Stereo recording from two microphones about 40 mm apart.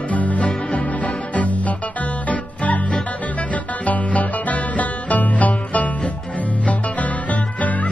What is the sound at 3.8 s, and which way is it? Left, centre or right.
Music, left.